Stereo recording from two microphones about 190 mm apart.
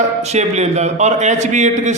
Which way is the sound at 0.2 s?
35° right (ahead or behind).